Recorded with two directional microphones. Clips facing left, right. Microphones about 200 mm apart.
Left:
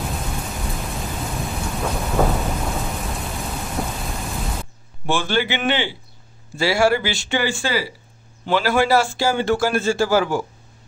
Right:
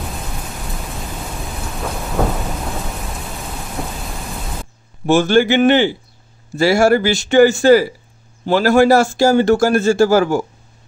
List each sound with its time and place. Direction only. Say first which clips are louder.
1.8 s thunder: even; centre (ahead or behind)
3.8 s rain: even; centre (ahead or behind)
5.0 s a man's voice: right 9 dB; 45° right (ahead or behind)